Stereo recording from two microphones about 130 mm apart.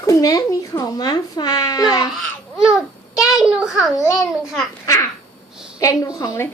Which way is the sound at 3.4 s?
5° right (ahead or behind).